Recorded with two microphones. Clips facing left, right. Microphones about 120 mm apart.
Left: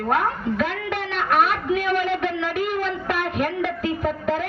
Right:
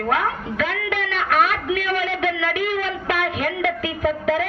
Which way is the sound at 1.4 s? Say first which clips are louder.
Even; 90° right.